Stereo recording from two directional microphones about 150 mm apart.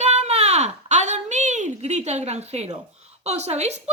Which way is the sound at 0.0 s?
50° right (ahead or behind).